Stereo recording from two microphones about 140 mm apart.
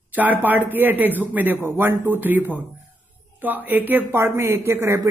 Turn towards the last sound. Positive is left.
turn(degrees=-20)  # may be behind; listen again after turning